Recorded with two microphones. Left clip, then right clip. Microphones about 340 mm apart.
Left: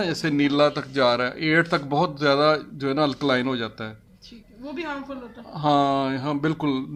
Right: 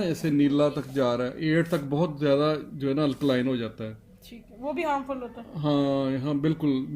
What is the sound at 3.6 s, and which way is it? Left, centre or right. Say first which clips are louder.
Speech: left 3 dB; left.